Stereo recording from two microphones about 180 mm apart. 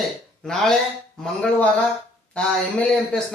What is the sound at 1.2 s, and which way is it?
A man's voice, 5° left (ahead or behind).